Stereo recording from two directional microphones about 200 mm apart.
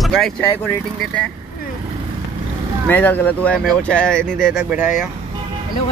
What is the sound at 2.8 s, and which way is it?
Speech, 10° left (ahead or behind).